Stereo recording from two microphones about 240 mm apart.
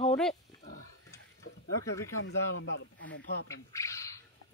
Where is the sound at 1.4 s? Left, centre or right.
Left.